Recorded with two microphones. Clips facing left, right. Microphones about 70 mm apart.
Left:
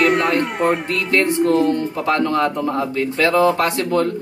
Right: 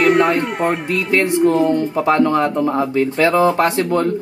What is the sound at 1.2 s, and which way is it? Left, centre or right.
Speech, centre.